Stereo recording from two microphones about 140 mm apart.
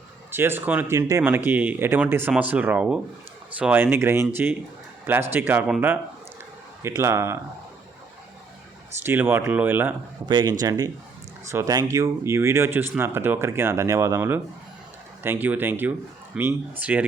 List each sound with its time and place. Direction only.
0.3 s speech: 15° right (ahead or behind)
5.3 s speech: 15° right (ahead or behind)
6.8 s speech: 20° right (ahead or behind)
9.0 s speech: 15° right (ahead or behind)
10.2 s speech: 30° right (ahead or behind); by 17.1 s 10° right (ahead or behind)